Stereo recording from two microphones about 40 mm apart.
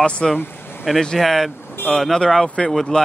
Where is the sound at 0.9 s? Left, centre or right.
Centre.